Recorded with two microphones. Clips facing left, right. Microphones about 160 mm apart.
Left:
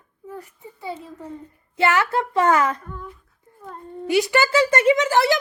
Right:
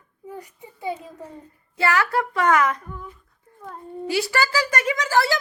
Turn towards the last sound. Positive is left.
turn(degrees=20)  # may be behind; listen again after turning